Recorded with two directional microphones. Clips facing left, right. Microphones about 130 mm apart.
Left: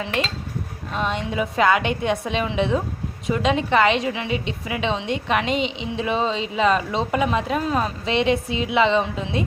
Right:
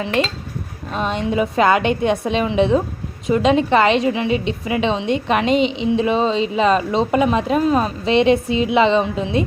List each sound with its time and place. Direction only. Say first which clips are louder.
0.9 s a woman's voice: right 4 dB; 30° right (ahead or behind)